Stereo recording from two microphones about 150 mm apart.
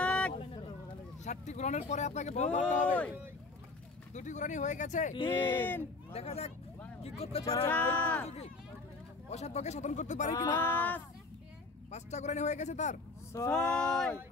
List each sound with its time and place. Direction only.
0.0 s vehicle: 10° left (ahead or behind)
1.2 s speech: 50° left (ahead or behind)
4.1 s speech: 55° left (ahead or behind)
5.2 s speech: 15° left (ahead or behind)
6.1 s speech: 45° left (ahead or behind)
7.6 s speech: 10° left (ahead or behind)
9.3 s speech: 50° left (ahead or behind)
10.5 s speech: 10° left (ahead or behind)
11.9 s speech: 50° left (ahead or behind)
13.5 s speech: 5° left (ahead or behind)